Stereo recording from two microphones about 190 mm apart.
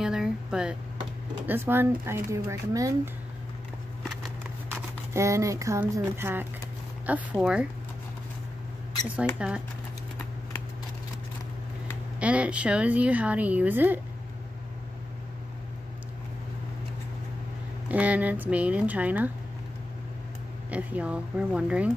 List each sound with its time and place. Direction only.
0.0 s a woman's voice: 5° right (ahead or behind)
5.1 s a woman's voice: 15° right (ahead or behind)
9.4 s speech: 5° right (ahead or behind)
12.2 s a woman's voice: 5° right (ahead or behind)
17.8 s a woman's voice: 5° right (ahead or behind)
20.7 s a woman's voice: 5° right (ahead or behind)